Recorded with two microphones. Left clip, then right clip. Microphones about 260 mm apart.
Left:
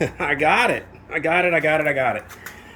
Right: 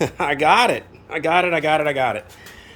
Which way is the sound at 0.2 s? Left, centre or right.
Centre.